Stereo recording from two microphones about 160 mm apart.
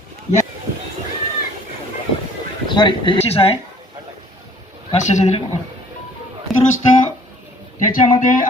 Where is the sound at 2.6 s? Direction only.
30° left (ahead or behind).